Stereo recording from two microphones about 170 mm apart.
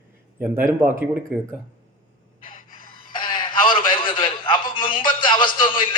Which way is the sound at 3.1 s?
30° left (ahead or behind).